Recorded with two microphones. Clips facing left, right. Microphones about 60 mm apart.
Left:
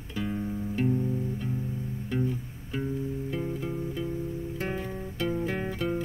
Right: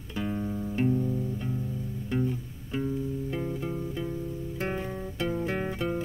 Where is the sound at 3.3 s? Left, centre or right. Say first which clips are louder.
Even; centre.